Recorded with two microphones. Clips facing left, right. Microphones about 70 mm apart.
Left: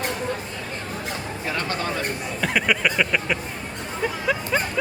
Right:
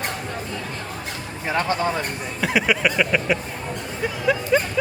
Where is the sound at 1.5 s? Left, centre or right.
Right.